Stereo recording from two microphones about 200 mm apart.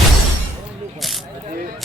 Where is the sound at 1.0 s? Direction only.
Centre (ahead or behind).